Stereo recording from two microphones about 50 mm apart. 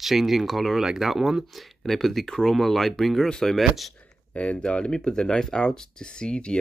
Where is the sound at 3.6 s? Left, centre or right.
Centre.